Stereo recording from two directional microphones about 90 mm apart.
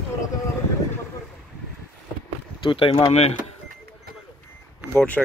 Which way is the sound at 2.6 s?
85° left.